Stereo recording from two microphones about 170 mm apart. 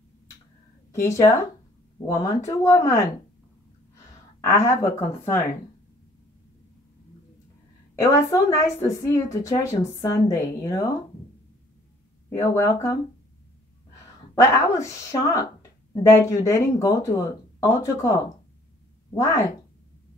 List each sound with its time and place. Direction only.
0.9 s a woman's voice: 15° left (ahead or behind)
4.6 s a woman's voice: 15° left (ahead or behind)
8.0 s a woman's voice: 20° left (ahead or behind)
12.4 s a woman's voice: 15° left (ahead or behind)
14.3 s a woman's voice: 20° left (ahead or behind)
19.1 s a woman's voice: 15° left (ahead or behind)